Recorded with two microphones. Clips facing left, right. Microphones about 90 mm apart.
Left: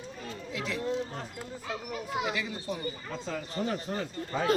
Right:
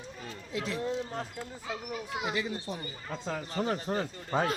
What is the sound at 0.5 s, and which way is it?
Speech, 35° right (ahead or behind).